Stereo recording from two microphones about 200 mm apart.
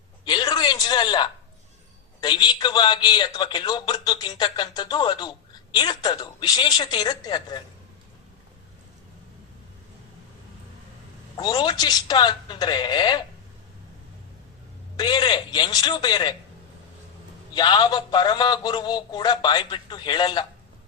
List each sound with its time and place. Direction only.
0.3 s a sound: 20° left (ahead or behind)
2.2 s a man's voice: 20° left (ahead or behind)
11.3 s a man's voice: 20° left (ahead or behind)
14.9 s a man's voice: 20° left (ahead or behind)
17.5 s a man's voice: 20° left (ahead or behind)